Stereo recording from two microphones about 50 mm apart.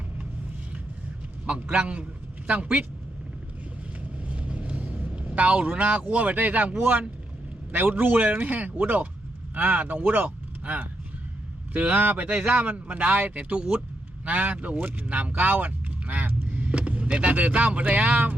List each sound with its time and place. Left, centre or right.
1.5 s speech: right
4.2 s vehicle: right
7.7 s speech: right
14.3 s speech: right